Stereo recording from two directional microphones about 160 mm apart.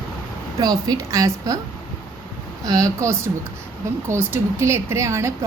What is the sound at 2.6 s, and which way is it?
A woman's voice, 20° right (ahead or behind).